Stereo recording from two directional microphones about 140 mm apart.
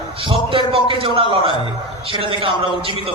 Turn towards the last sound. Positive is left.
turn(degrees=-40)  # may be behind; listen again after turning